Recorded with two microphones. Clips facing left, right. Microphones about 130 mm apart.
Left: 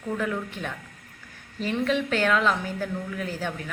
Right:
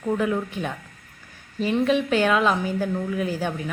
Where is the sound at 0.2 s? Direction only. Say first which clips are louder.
Right 5 dB; 15° right (ahead or behind).